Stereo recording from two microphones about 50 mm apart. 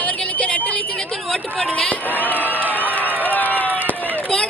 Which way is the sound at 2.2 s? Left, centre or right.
Left.